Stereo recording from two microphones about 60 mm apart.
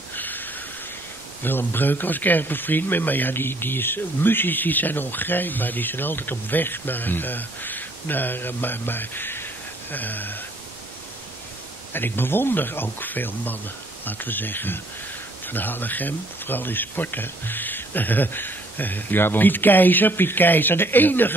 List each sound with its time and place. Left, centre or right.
0.1 s a sound: left
1.4 s speech: left
11.9 s speech: left